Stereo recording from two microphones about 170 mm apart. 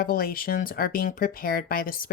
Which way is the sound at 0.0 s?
60° left (ahead or behind).